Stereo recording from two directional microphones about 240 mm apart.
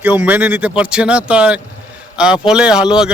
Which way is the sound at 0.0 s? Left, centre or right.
Centre.